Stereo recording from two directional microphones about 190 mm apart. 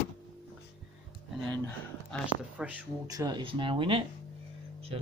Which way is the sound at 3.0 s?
20° right (ahead or behind).